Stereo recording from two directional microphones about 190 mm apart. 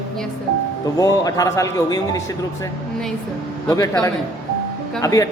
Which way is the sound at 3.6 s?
15° left (ahead or behind).